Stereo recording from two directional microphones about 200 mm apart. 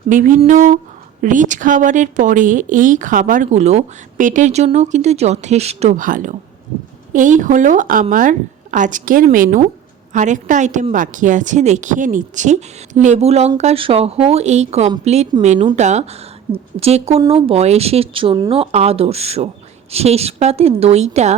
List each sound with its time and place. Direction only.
0.1 s speech: 40° right (ahead or behind)